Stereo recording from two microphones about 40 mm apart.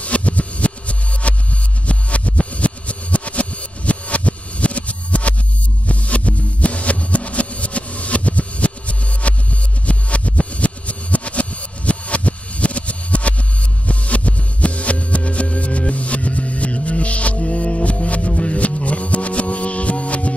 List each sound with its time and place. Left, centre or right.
0.0 s music: left